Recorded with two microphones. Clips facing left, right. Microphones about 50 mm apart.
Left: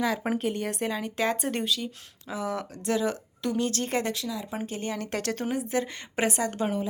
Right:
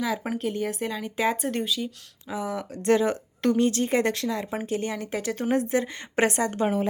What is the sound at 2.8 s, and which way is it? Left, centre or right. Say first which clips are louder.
Speech: right 6 dB; right.